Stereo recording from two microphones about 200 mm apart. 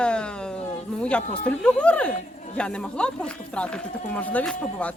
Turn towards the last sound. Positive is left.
turn(degrees=5)  # may be behind; listen again after turning